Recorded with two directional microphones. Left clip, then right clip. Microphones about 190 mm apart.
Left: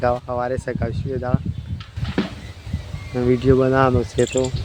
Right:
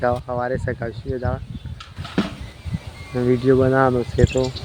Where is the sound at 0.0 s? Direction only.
5° left (ahead or behind).